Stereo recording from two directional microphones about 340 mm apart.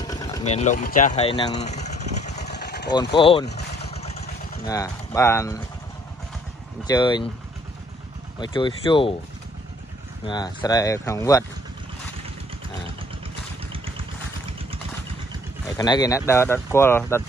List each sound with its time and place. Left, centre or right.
0.0 s vehicle: centre; by 2.9 s left
2.9 s speech: centre
3.4 s vehicle: left
4.6 s speech: centre
6.9 s speech: centre
8.4 s speech: centre
10.2 s speech: centre
13.7 s vehicle: centre
15.6 s speech: centre